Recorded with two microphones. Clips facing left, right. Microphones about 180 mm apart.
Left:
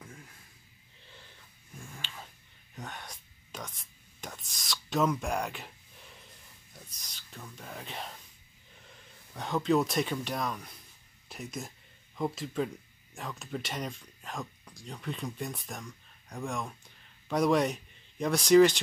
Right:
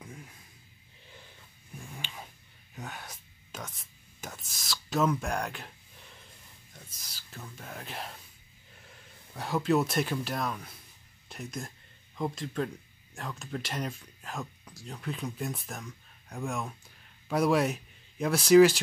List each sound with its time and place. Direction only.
1.8 s a sound: 15° right (ahead or behind)
2.7 s whispering: 5° right (ahead or behind)
6.7 s whispering: 5° right (ahead or behind)
9.3 s speech: 5° right (ahead or behind)